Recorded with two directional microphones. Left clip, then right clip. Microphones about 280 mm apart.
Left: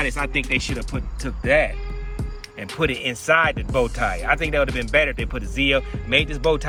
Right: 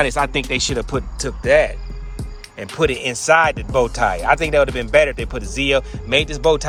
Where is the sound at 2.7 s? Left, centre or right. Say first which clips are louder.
Right 4 dB; centre.